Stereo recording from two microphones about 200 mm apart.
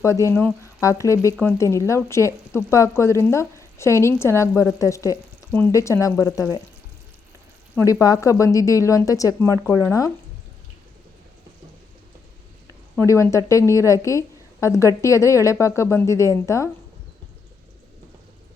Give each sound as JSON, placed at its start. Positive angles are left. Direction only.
{"t": 0.0, "sound": "speech", "side_deg": 15}
{"t": 7.8, "sound": "speech", "side_deg": 15}
{"t": 13.0, "sound": "speech", "side_deg": 15}